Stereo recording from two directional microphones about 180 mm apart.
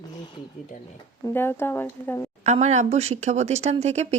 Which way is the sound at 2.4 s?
40° right (ahead or behind).